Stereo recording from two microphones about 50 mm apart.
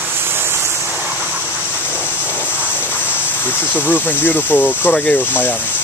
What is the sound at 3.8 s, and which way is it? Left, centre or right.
Speech, left.